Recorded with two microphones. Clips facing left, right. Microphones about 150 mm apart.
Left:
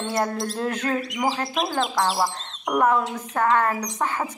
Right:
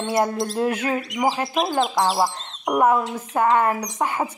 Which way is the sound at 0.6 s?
10° right (ahead or behind).